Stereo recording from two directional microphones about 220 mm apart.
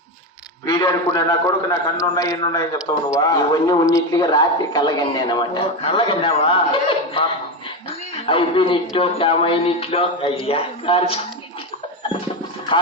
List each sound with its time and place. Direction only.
0.6 s a man's voice: 20° left (ahead or behind)
8.3 s a man's voice: 25° left (ahead or behind)